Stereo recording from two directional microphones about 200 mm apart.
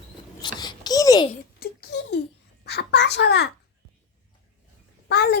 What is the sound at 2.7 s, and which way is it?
Babbling, 55° left (ahead or behind).